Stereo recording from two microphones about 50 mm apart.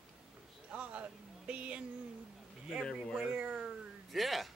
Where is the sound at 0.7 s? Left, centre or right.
Right.